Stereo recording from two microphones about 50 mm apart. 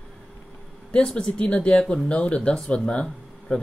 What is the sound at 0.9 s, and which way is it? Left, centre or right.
Speech, centre.